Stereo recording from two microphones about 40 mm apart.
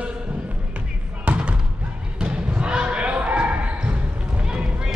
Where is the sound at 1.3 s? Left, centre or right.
Right.